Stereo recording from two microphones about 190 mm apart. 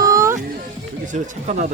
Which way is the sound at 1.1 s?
40° right (ahead or behind).